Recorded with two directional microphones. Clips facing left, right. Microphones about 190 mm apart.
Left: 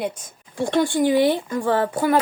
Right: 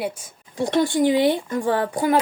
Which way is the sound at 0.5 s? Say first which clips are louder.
Even; 20° right (ahead or behind).